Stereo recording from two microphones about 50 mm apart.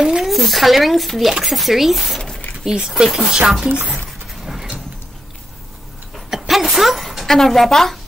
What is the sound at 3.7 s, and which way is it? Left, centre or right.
Speech, right.